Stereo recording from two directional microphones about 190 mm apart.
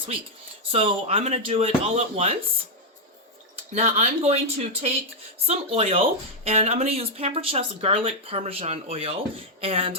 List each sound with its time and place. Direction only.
0.7 s speech: 30° right (ahead or behind)
3.5 s speech: 35° right (ahead or behind)
9.6 s a sound: 30° right (ahead or behind)